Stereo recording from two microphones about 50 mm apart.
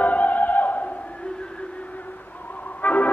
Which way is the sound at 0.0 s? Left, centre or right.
Left.